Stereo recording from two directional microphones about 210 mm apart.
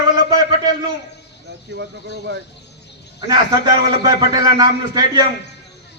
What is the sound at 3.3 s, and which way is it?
A man's voice, 20° right (ahead or behind).